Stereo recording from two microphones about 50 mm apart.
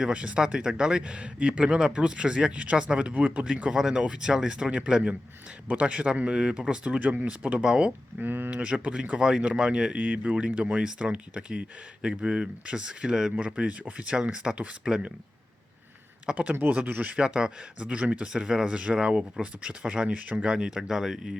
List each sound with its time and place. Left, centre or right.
0.0 s speech: right
0.4 s speech: centre
7.0 s speech: right; by 7.9 s centre
8.2 s speech: right
8.4 s speech: right
16.2 s speech: right
16.8 s speech: right
17.1 s speech: centre